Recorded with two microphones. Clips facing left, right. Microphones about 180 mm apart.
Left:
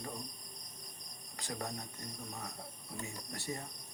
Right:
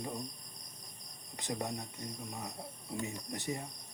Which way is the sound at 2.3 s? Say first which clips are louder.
Right 3 dB; 15° right (ahead or behind).